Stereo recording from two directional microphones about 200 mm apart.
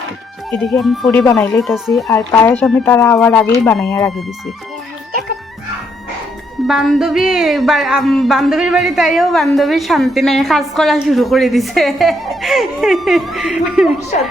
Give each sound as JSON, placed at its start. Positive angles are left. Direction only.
{"t": 0.5, "sound": "speech", "side_deg": 0}
{"t": 2.0, "sound": "speech", "side_deg": 10}
{"t": 3.6, "sound": "speech", "side_deg": 5}
{"t": 3.8, "sound": "speech", "side_deg": 15}
{"t": 6.7, "sound": "speech", "side_deg": 0}
{"t": 14.1, "sound": "speech", "side_deg": 35}